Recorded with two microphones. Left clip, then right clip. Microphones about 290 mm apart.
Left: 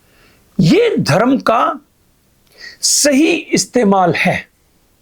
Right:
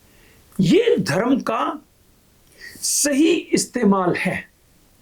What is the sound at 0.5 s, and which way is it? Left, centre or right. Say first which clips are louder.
Speech: left 4 dB; left.